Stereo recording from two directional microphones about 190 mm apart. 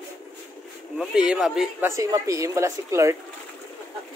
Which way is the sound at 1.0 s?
5° right (ahead or behind).